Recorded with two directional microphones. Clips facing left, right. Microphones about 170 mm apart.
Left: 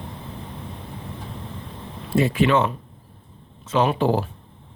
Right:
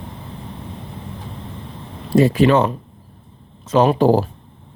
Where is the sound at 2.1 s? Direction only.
40° right (ahead or behind).